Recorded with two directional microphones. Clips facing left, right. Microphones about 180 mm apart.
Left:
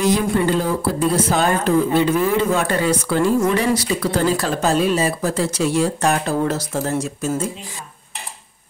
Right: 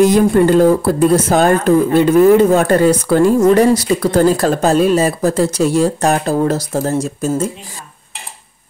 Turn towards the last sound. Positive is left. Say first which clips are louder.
# right 5 dB
turn(degrees=-40)  # may be behind; listen again after turning